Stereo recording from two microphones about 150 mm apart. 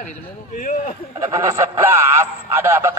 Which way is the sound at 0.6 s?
60° left (ahead or behind).